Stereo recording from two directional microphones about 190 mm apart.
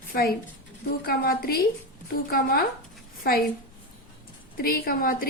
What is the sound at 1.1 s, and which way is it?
A woman's voice, 50° left (ahead or behind).